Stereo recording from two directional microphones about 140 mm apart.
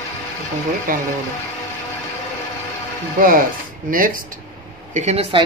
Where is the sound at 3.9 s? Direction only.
80° right.